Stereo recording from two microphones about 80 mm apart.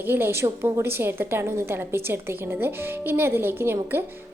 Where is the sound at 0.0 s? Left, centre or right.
Right.